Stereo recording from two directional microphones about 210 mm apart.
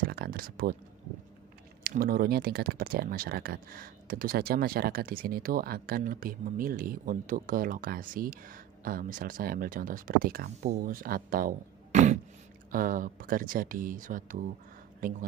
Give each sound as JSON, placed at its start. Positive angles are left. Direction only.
{"t": 0.0, "sound": "speech", "side_deg": -45}
{"t": 1.8, "sound": "speech", "side_deg": -45}